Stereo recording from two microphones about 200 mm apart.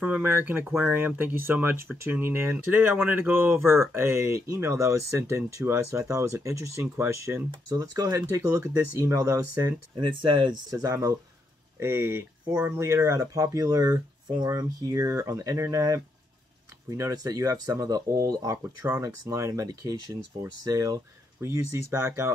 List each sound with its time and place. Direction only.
0.0 s speech: 10° right (ahead or behind)